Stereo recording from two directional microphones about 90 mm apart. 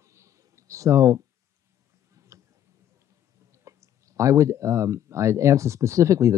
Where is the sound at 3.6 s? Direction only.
35° right (ahead or behind).